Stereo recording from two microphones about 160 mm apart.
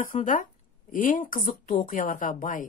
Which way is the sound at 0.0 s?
55° left (ahead or behind).